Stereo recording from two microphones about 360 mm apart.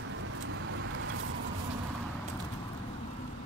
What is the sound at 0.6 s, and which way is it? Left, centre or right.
Vehicle, right.